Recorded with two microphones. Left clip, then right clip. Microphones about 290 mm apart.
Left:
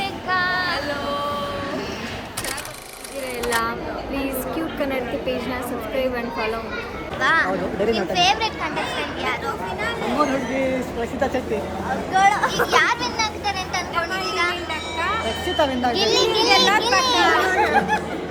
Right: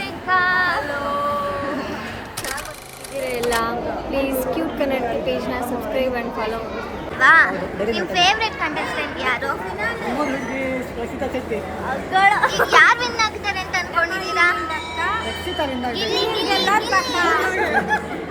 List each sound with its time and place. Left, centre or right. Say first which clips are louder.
0.3 s female singing: right 5 dB; centre
3.4 s a sound: right 1 dB; centre
7.2 s a child's voice: right 6 dB; centre
12.1 s speech: right 2 dB; centre
12.7 s a sound: right 8 dB; centre
15.0 s a child's voice: left 1 dB; centre